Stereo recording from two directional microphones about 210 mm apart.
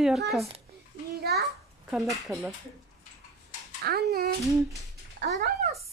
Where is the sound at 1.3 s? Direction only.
50° right (ahead or behind).